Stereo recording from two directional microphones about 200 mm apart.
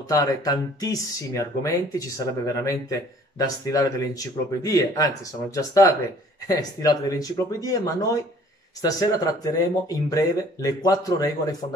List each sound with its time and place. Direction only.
0.1 s speech: 20° left (ahead or behind)